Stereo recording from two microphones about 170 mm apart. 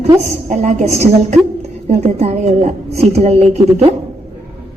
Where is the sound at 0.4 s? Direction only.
45° right (ahead or behind).